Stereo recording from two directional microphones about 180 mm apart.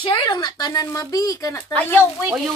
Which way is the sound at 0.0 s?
25° left (ahead or behind).